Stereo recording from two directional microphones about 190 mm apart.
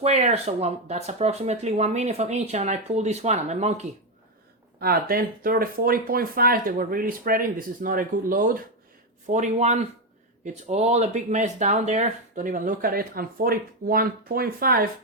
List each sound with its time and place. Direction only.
0.0 s speech: 35° right (ahead or behind)
4.8 s speech: 50° right (ahead or behind)